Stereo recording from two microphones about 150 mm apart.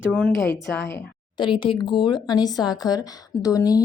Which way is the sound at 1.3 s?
30° left (ahead or behind).